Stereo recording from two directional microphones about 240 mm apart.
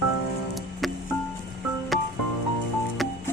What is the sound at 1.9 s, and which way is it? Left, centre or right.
Music, centre.